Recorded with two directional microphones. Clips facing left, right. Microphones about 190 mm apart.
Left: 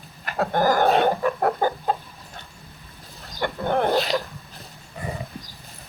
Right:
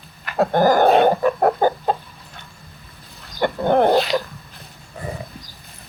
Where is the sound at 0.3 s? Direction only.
25° right (ahead or behind).